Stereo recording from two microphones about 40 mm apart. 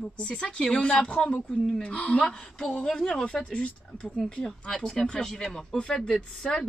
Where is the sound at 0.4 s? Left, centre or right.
Left.